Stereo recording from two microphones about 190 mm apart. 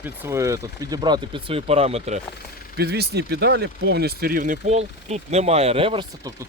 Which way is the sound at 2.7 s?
55° right (ahead or behind).